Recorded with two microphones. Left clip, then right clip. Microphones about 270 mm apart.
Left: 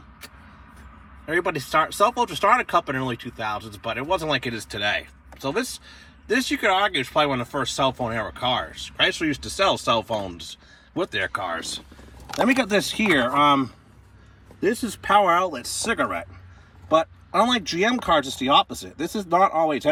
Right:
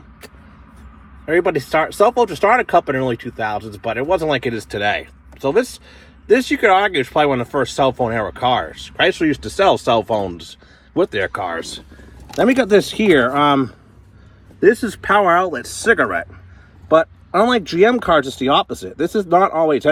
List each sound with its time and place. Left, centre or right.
1.2 s speech: centre
17.7 s speech: centre